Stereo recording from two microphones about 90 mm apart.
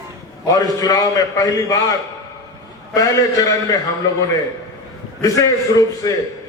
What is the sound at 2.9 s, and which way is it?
Speech, 40° left (ahead or behind).